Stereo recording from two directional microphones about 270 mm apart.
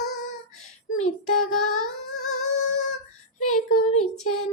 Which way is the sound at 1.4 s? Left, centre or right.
Left.